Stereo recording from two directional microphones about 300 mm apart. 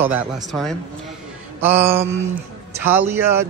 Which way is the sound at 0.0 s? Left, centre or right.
Centre.